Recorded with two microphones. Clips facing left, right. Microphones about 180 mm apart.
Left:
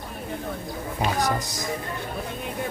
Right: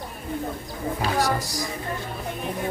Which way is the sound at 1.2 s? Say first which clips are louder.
Right 1 dB; 20° left (ahead or behind).